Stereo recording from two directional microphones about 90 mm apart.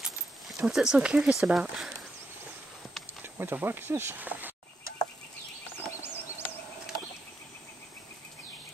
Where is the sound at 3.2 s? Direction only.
25° right (ahead or behind).